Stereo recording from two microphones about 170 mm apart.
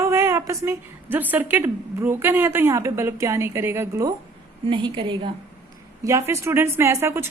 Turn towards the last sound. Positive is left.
turn(degrees=-15)  # may be behind; listen again after turning